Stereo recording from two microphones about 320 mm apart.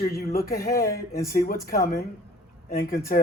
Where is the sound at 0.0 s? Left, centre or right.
Left.